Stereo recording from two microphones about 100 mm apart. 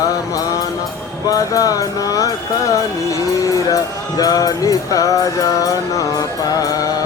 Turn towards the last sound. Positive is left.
turn(degrees=40)  # may be behind; listen again after turning